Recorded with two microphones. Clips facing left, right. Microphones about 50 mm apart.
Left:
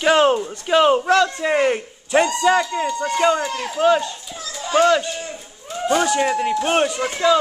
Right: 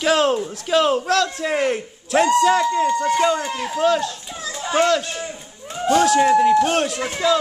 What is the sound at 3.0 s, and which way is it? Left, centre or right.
A child's voice, centre.